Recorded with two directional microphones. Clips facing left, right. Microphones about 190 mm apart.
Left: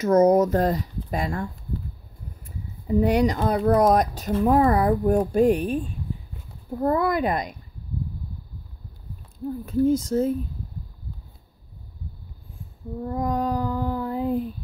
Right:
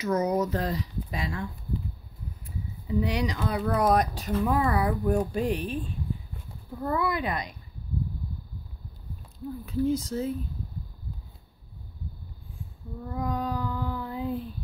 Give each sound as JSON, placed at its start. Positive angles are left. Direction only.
{"t": 0.0, "sound": "speech", "side_deg": 45}
{"t": 6.8, "sound": "speech", "side_deg": 45}
{"t": 9.7, "sound": "speech", "side_deg": 45}
{"t": 13.0, "sound": "speech", "side_deg": 40}